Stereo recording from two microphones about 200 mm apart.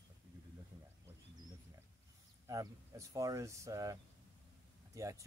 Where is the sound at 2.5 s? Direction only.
15° right (ahead or behind).